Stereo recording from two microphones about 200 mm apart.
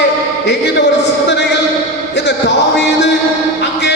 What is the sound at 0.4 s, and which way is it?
Speech, 60° left (ahead or behind).